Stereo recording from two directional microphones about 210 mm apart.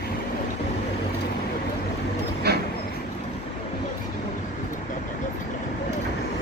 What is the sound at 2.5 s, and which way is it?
Vehicle, 50° right (ahead or behind).